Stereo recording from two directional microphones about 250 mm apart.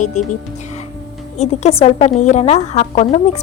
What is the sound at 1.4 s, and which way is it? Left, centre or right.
A woman's voice, left.